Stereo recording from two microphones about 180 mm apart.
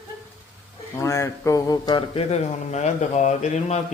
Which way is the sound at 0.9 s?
15° left (ahead or behind).